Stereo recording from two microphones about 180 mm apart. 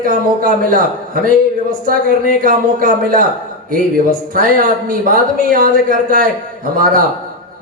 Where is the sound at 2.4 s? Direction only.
50° right (ahead or behind).